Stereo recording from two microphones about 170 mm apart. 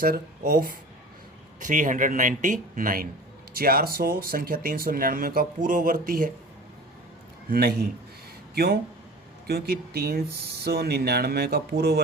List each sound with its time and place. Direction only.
0.0 s speech: 60° right (ahead or behind)
7.5 s speech: 65° right (ahead or behind)